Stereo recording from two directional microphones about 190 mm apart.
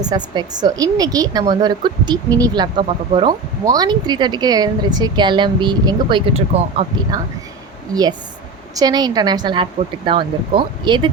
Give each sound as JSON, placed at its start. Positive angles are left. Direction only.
{"t": 0.1, "sound": "a woman's voice", "side_deg": -20}
{"t": 7.1, "sound": "a woman's voice", "side_deg": -20}
{"t": 8.7, "sound": "a woman's voice", "side_deg": -20}